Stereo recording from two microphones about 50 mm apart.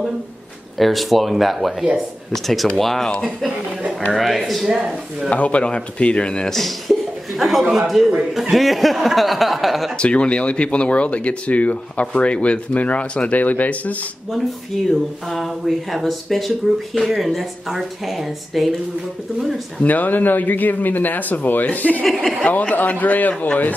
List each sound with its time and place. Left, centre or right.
0.7 s speech: centre
4.6 s speech: centre
5.3 s speech: left
6.5 s chuckle: centre
7.7 s speech: centre
9.9 s speech: left
15.2 s speech: centre
19.8 s speech: left